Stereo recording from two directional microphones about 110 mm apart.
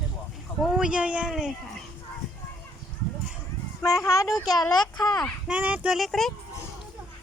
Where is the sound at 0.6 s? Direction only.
5° right (ahead or behind).